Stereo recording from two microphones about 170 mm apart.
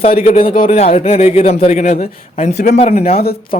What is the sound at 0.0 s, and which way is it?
A man's voice, 35° left (ahead or behind).